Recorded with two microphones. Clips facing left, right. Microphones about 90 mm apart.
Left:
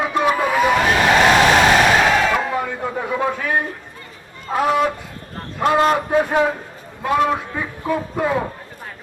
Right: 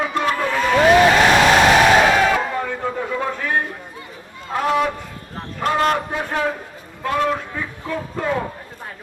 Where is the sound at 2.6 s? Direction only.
15° left (ahead or behind).